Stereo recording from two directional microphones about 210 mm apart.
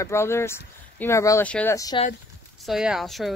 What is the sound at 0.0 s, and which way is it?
Speech, 10° left (ahead or behind).